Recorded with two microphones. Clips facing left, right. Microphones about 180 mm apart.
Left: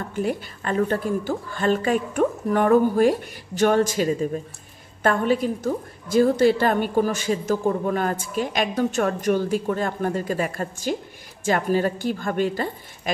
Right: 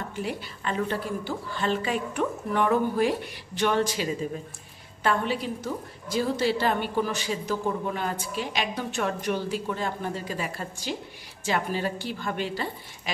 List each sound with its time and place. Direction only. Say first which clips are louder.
0.1 s a woman's voice: left 7 dB; 50° left (ahead or behind)